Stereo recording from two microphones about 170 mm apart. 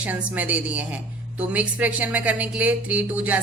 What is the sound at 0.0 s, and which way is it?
A woman's voice, 10° right (ahead or behind).